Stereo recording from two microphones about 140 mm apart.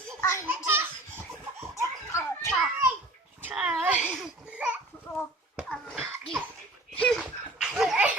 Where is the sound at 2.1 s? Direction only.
20° left (ahead or behind).